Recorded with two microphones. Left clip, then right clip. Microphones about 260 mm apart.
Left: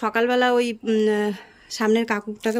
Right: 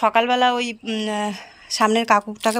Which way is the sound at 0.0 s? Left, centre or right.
Centre.